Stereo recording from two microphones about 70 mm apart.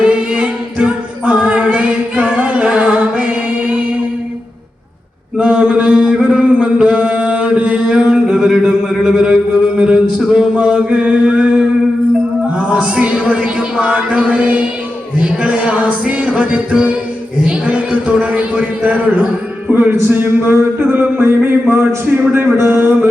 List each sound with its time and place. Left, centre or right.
0.1 s a capella: centre
5.4 s mantra: centre
6.2 s a sound: centre
10.2 s male singing: centre
12.5 s music: centre
17.4 s a sound: centre; by 22.9 s right